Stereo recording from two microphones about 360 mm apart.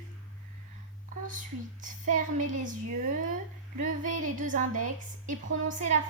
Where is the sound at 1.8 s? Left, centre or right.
Right.